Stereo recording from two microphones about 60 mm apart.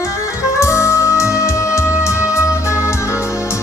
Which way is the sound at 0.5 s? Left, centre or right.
Left.